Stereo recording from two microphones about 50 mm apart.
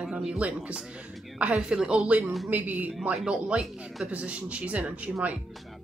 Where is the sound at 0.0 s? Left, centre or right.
Centre.